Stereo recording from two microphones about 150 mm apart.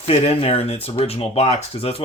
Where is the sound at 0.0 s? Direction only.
40° left (ahead or behind).